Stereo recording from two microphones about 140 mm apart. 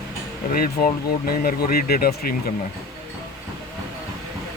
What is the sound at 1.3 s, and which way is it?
Speech, 90° left.